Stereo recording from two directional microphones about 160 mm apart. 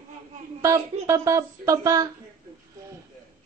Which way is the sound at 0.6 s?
20° right (ahead or behind).